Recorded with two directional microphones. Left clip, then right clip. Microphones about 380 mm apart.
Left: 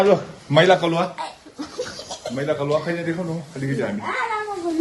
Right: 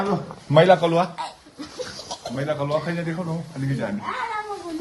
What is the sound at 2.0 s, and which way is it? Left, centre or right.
Speech, centre.